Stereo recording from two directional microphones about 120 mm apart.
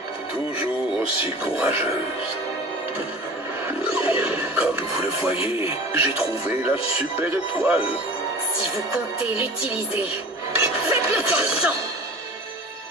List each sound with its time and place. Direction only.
1.4 s speech: 15° right (ahead or behind)
3.6 s speech: 20° right (ahead or behind)
10.6 s music: 15° right (ahead or behind)